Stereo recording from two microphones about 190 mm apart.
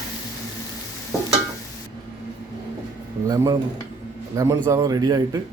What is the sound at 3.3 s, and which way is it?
A man's voice, 20° right (ahead or behind).